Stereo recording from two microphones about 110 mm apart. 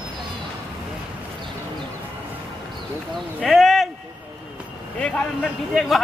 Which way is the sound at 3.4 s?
Centre (ahead or behind).